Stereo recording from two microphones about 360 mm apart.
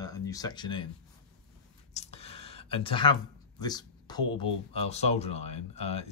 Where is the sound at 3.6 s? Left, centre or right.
Centre.